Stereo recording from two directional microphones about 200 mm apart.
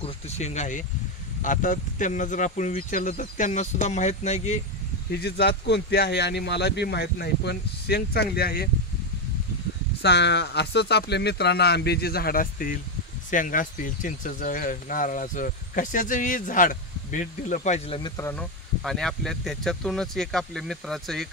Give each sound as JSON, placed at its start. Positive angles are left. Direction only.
{"t": 0.0, "sound": "speech", "side_deg": 35}
{"t": 5.2, "sound": "speech", "side_deg": 55}
{"t": 10.0, "sound": "speech", "side_deg": 60}
{"t": 18.1, "sound": "speech", "side_deg": 10}